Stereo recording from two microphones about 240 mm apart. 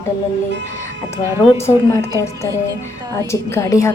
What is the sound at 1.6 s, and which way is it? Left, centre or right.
A woman's voice, centre.